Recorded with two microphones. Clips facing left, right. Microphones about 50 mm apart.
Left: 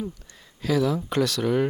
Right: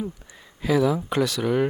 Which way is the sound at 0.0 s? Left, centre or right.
Centre.